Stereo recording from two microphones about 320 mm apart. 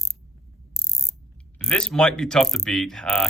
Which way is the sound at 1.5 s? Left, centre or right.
Centre.